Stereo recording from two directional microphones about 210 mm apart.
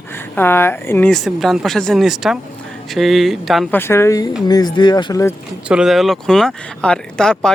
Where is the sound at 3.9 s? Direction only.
15° left (ahead or behind).